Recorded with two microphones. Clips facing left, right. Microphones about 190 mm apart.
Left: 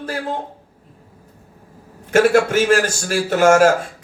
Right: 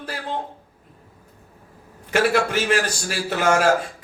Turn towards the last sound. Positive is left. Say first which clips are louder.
# left 7 dB
turn(degrees=45)  # may be behind; listen again after turning